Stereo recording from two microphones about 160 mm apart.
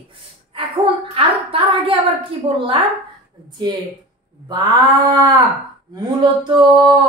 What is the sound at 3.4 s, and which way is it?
Speech, 25° right (ahead or behind).